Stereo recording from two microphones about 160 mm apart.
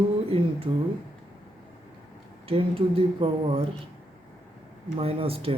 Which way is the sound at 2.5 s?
35° right (ahead or behind).